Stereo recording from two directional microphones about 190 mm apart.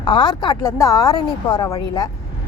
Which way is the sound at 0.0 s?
25° left (ahead or behind).